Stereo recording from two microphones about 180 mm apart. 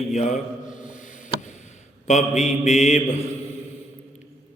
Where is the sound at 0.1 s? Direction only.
40° left (ahead or behind).